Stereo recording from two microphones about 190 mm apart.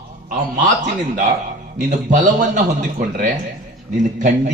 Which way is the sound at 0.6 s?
40° right (ahead or behind).